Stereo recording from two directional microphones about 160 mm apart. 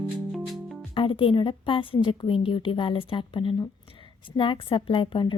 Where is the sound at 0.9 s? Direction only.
30° left (ahead or behind).